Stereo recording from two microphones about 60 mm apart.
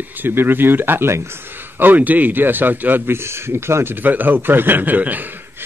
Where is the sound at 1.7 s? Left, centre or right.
Right.